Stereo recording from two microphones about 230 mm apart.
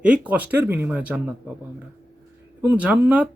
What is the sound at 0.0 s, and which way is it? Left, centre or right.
A man's voice, centre.